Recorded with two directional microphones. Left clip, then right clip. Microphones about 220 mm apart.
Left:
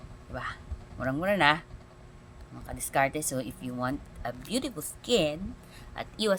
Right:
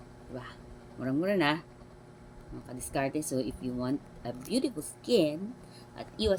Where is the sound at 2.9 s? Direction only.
50° left (ahead or behind).